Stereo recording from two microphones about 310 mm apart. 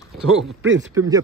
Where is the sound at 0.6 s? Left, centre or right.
Right.